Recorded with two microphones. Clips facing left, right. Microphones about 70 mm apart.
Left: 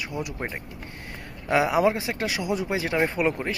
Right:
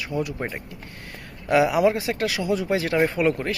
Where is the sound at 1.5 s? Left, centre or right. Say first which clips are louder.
Right 2 dB; left.